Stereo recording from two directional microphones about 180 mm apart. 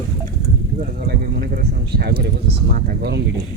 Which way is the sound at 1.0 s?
55° right (ahead or behind).